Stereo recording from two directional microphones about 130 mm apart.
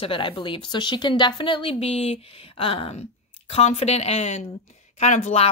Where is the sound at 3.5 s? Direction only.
55° left (ahead or behind).